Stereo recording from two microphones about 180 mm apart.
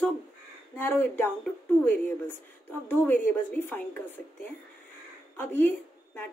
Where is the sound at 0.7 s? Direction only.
10° left (ahead or behind).